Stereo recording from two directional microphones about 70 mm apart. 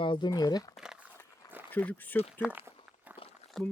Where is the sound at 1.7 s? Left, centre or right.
Left.